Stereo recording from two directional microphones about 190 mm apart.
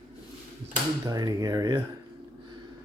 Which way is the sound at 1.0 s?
20° right (ahead or behind).